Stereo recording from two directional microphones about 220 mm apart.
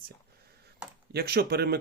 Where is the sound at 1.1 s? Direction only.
45° right (ahead or behind).